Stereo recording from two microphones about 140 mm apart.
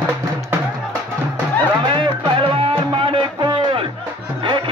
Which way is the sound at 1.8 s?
35° right (ahead or behind).